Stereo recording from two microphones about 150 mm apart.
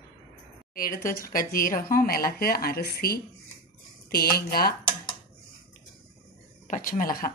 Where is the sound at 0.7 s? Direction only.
70° left (ahead or behind).